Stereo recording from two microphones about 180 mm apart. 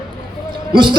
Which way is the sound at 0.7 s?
25° right (ahead or behind).